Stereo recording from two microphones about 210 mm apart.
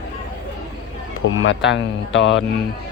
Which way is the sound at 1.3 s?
60° left (ahead or behind).